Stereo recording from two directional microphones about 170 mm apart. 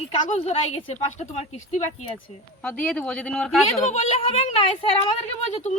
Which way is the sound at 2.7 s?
10° left (ahead or behind).